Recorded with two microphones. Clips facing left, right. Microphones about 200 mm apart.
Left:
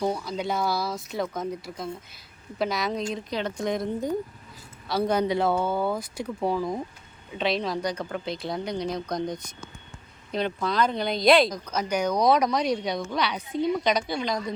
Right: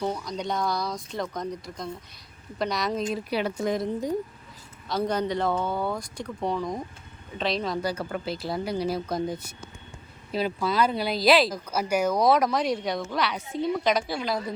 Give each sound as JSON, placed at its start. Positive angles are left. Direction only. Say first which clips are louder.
{"t": 0.0, "sound": "speech", "louder": "left 2 dB", "side_deg": 10}
{"t": 4.9, "sound": "speech", "louder": "left 2 dB", "side_deg": 10}